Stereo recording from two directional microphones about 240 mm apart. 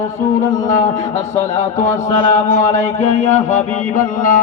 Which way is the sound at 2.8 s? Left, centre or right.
Left.